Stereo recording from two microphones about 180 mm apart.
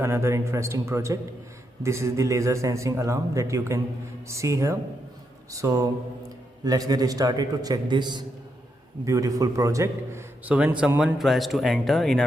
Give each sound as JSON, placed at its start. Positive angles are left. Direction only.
{"t": 0.0, "sound": "a man's voice", "side_deg": -15}